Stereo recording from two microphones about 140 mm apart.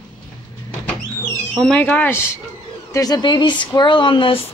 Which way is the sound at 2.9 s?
25° left (ahead or behind).